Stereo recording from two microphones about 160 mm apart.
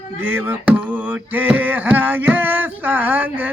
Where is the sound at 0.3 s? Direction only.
15° right (ahead or behind).